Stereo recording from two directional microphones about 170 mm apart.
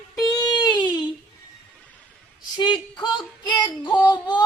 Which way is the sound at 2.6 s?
25° left (ahead or behind).